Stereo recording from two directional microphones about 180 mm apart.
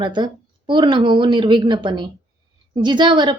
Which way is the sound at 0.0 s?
25° right (ahead or behind).